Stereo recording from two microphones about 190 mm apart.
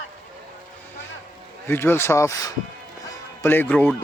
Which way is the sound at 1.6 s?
10° left (ahead or behind).